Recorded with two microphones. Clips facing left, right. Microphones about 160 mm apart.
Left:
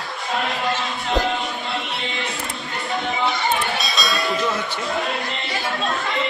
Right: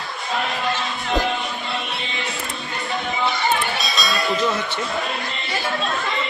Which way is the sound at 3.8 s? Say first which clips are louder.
Even; centre (ahead or behind).